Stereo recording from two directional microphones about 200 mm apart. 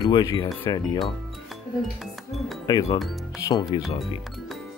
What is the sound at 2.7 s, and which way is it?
Speech, 20° left (ahead or behind).